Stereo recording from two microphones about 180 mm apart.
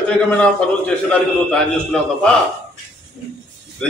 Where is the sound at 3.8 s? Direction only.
5° left (ahead or behind).